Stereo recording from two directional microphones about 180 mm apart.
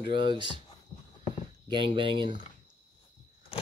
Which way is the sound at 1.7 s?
30° right (ahead or behind).